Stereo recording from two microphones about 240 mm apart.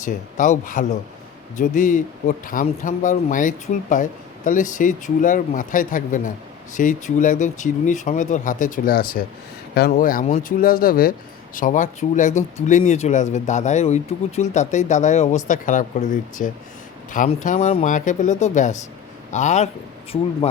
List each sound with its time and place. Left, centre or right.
0.0 s speech: left